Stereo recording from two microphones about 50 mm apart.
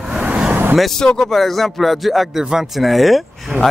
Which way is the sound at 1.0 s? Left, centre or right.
Centre.